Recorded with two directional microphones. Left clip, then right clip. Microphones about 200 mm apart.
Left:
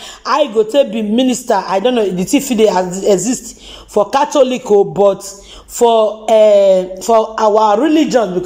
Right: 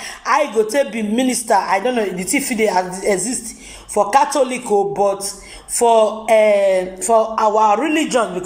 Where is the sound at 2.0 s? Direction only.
50° left (ahead or behind).